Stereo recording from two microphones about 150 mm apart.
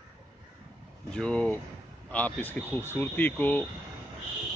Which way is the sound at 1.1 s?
5° left (ahead or behind).